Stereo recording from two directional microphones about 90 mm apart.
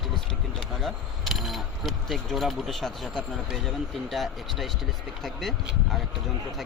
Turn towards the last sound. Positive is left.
turn(degrees=0)  # may be behind; listen again after turning